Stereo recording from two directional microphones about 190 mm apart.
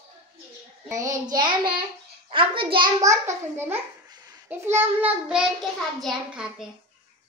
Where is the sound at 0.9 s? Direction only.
20° right (ahead or behind); by 6.5 s centre (ahead or behind).